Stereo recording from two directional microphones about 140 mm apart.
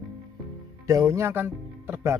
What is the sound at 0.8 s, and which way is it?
A man's voice, 25° right (ahead or behind).